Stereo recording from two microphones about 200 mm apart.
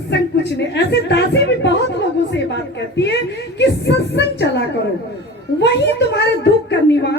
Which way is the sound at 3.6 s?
55° left (ahead or behind).